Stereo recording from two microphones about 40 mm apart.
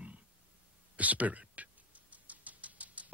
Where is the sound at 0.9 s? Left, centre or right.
Right.